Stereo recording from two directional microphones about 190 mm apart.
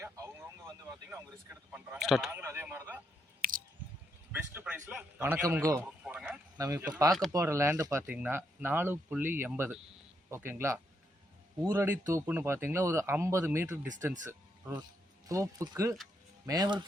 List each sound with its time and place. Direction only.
0.0 s speech: 15° right (ahead or behind)
3.4 s scissors: 50° right (ahead or behind)
4.3 s speech: 10° right (ahead or behind)
13.8 s speech: 40° right (ahead or behind)
14.3 s a sound: 10° right (ahead or behind)
15.3 s speech: 15° right (ahead or behind)